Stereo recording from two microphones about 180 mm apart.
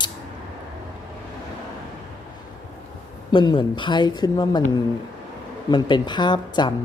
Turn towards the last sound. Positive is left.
turn(degrees=25)  # may be behind; listen again after turning